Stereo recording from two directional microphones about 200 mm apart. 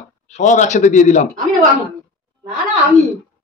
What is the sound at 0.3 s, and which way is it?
A man's voice, 35° left (ahead or behind).